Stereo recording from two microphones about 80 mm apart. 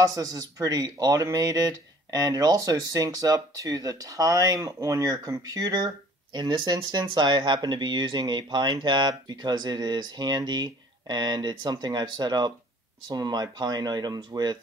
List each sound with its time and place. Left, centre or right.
0.0 s speech: right